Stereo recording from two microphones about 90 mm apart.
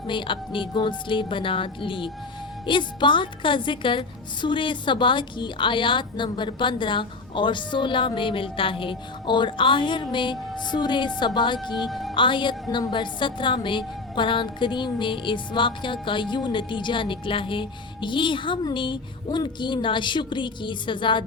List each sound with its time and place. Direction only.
0.1 s a woman's voice: 65° left (ahead or behind)
11.7 s speech: centre (ahead or behind)
12.1 s a woman's voice: 65° left (ahead or behind)